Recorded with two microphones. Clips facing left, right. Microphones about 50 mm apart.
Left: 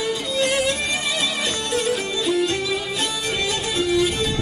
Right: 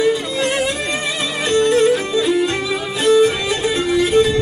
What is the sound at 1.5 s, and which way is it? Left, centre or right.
Music, right.